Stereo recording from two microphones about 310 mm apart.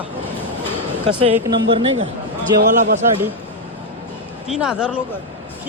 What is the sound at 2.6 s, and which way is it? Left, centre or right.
Speech, right.